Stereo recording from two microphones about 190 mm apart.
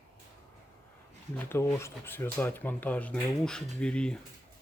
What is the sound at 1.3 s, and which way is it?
Speech, 10° left (ahead or behind).